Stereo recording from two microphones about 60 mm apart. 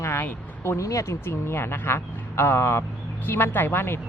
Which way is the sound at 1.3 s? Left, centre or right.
Left.